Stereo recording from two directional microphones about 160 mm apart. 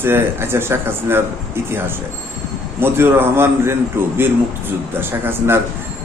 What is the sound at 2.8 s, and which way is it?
Speech, 15° right (ahead or behind).